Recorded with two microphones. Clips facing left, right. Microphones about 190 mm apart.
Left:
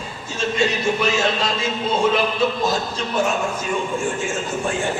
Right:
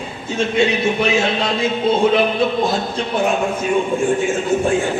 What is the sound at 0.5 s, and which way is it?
Music, 60° right (ahead or behind).